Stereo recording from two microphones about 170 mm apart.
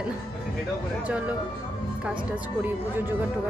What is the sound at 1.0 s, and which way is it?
Speech, 10° right (ahead or behind).